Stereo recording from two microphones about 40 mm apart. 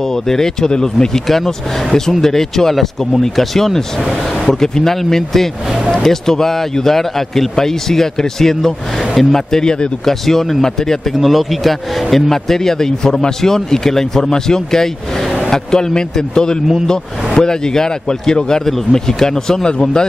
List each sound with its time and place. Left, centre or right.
0.1 s speech: centre
1.2 s speech: centre
10.2 s speech: centre
11.1 s speech: centre; by 20.1 s left